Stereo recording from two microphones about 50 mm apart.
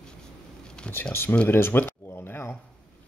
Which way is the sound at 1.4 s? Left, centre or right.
Left.